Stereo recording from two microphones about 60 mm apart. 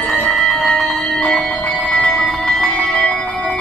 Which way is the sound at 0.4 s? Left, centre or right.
Centre.